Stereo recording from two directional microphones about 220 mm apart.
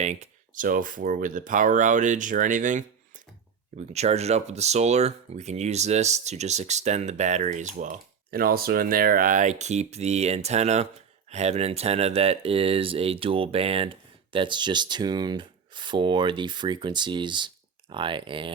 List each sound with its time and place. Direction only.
0.0 s speech: 30° right (ahead or behind)
3.9 s speech: 30° right (ahead or behind)